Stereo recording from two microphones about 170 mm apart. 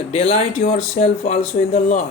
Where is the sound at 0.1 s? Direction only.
40° left (ahead or behind).